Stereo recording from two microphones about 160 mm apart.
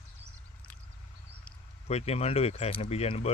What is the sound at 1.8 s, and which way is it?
Speech, 40° left (ahead or behind).